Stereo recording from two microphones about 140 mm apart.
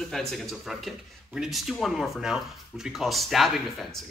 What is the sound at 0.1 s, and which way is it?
Speech, centre (ahead or behind).